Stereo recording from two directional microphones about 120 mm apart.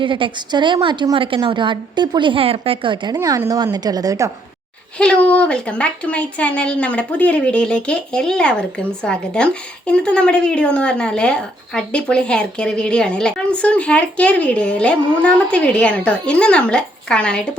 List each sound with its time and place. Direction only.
0.0 s a woman's voice: 45° right (ahead or behind)
3.2 s a woman's voice: 25° right (ahead or behind)
4.9 s speech: 10° left (ahead or behind)